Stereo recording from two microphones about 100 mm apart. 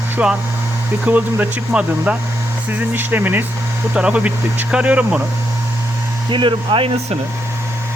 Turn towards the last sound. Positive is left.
turn(degrees=-65)  # may be behind; listen again after turning